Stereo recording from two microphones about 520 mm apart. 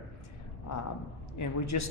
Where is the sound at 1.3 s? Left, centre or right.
Left.